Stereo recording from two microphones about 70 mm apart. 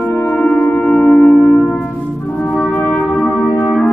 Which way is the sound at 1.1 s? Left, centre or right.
Centre.